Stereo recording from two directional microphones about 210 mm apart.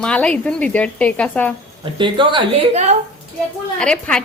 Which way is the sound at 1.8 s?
25° right (ahead or behind).